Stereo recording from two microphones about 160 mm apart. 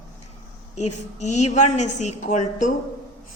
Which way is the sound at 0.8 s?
45° left (ahead or behind).